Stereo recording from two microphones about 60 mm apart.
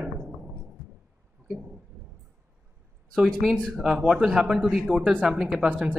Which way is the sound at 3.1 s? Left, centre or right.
Centre.